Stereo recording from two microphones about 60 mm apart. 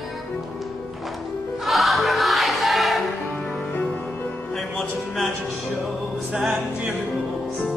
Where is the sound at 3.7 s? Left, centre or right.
Left.